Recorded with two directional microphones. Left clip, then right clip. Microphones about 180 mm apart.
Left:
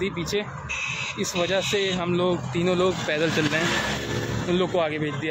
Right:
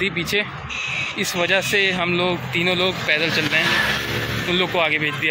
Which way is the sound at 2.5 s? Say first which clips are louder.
Right 3 dB; 35° left (ahead or behind).